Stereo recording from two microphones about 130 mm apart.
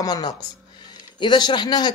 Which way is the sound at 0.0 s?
30° left (ahead or behind).